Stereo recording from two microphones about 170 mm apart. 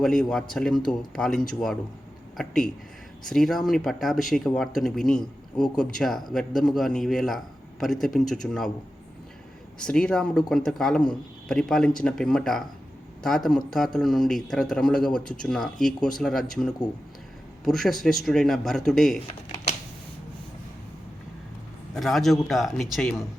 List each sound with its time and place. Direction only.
0.0 s speech: 5° left (ahead or behind)
9.8 s speech: 5° left (ahead or behind)
21.9 s speech: centre (ahead or behind)